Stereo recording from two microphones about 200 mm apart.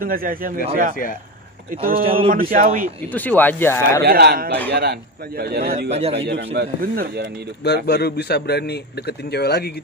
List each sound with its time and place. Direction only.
0.0 s a man's voice: 45° right (ahead or behind)
2.0 s speech: 30° right (ahead or behind)
2.5 s a man's voice: 45° right (ahead or behind)
3.1 s speech: 10° left (ahead or behind)
4.0 s a man's voice: 50° right (ahead or behind)
5.9 s speech: 30° right (ahead or behind)
6.1 s speech: 60° right (ahead or behind)
7.6 s a man's voice: 55° left (ahead or behind)